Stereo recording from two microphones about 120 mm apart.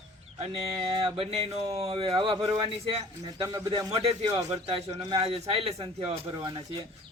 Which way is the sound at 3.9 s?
55° right (ahead or behind).